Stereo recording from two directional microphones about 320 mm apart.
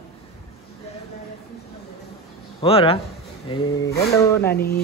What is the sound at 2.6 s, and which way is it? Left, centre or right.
A man's voice, centre.